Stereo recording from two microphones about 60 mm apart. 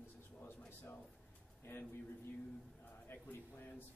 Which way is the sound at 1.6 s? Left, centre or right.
Left.